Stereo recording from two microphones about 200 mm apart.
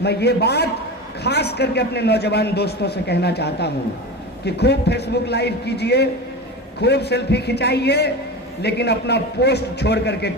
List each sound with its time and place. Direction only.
0.0 s a man's voice: 55° left (ahead or behind)